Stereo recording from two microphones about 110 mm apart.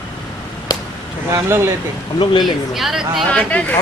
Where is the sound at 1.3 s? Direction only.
25° right (ahead or behind).